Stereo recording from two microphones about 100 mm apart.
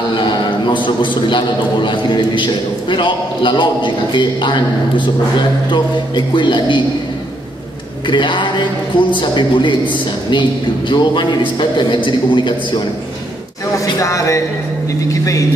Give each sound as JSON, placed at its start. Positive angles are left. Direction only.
{"t": 0.1, "sound": "a man's voice", "side_deg": 50}
{"t": 8.1, "sound": "a man's voice", "side_deg": 55}
{"t": 13.7, "sound": "a sound", "side_deg": 35}
{"t": 15.0, "sound": "vehicle", "side_deg": 35}